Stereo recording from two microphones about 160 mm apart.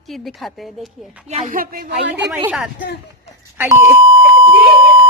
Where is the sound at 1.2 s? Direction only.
55° right (ahead or behind).